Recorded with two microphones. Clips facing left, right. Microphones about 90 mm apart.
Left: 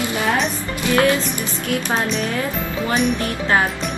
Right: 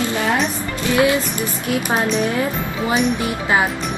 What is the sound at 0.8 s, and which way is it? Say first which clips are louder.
Speech: even; 15° right (ahead or behind).